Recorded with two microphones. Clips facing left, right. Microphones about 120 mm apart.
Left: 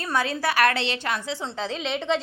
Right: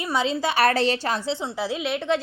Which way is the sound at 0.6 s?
40° right (ahead or behind).